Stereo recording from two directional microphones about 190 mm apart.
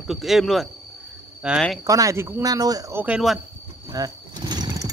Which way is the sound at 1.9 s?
15° right (ahead or behind).